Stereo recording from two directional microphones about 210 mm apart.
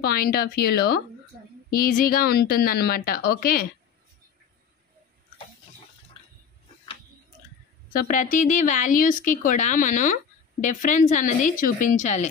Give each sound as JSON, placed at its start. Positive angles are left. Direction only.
{"t": 0.0, "sound": "a woman's voice", "side_deg": 45}
{"t": 7.9, "sound": "speech", "side_deg": 40}